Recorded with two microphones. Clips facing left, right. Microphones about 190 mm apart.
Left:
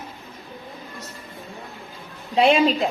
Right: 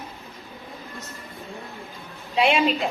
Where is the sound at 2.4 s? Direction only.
40° left (ahead or behind).